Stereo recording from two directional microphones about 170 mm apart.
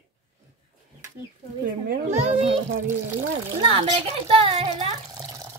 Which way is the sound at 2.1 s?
35° right (ahead or behind).